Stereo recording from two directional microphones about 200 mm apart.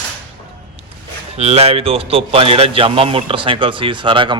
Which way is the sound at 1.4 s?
30° right (ahead or behind).